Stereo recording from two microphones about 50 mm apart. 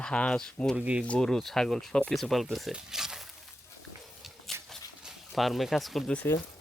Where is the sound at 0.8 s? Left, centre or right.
Right.